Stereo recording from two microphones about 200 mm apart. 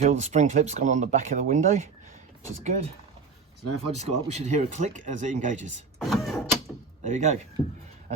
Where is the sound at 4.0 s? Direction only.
35° right (ahead or behind).